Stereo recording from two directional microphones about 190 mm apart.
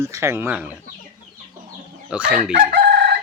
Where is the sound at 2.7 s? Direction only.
55° right (ahead or behind).